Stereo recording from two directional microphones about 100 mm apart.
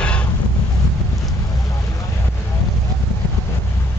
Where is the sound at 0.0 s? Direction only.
10° left (ahead or behind).